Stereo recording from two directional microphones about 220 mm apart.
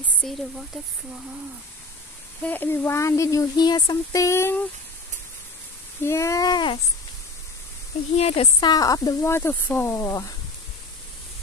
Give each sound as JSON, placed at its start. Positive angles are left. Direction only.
{"t": 0.0, "sound": "speech", "side_deg": 0}
{"t": 2.4, "sound": "speech", "side_deg": 10}
{"t": 6.0, "sound": "speech", "side_deg": 15}
{"t": 8.2, "sound": "speech", "side_deg": 25}